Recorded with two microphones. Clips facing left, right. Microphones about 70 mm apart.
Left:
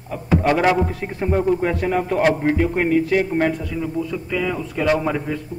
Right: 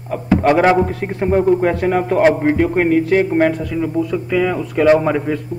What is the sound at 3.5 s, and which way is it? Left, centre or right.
A man's voice, right.